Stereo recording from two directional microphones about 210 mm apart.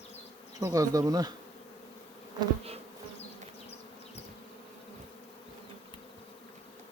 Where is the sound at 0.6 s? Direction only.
15° right (ahead or behind).